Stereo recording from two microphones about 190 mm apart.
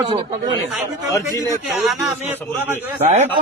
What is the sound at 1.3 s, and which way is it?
Speech, 15° left (ahead or behind).